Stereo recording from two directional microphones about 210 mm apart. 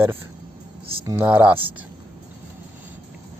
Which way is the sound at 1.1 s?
10° right (ahead or behind).